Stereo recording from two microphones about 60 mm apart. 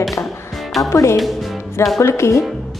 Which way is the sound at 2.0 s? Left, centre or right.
Left.